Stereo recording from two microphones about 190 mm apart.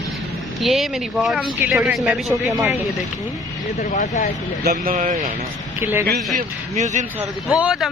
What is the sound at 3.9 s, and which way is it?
Speech, 45° left (ahead or behind).